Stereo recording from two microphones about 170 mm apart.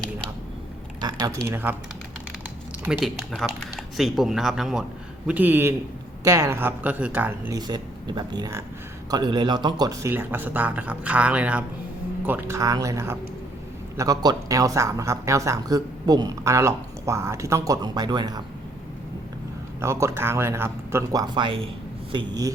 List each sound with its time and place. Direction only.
1.0 s speech: 20° right (ahead or behind)
1.5 s speech: 10° right (ahead or behind)
3.3 s speech: centre (ahead or behind)
7.7 s speech: 25° right (ahead or behind)
19.8 s speech: 15° right (ahead or behind)